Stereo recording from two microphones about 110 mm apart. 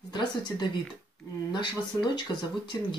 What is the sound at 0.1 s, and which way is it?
Speech, 45° left (ahead or behind).